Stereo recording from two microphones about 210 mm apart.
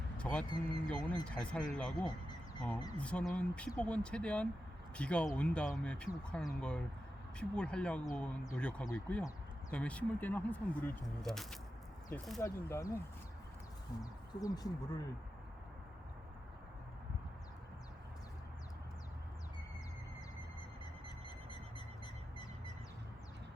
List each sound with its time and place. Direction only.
0.2 s speech: 5° left (ahead or behind)
12.4 s speech: 15° left (ahead or behind)
14.0 s speech: 15° left (ahead or behind)
21.2 s bird: 20° left (ahead or behind)